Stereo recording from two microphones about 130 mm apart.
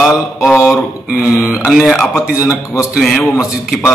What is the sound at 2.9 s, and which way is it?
Mantra, centre (ahead or behind).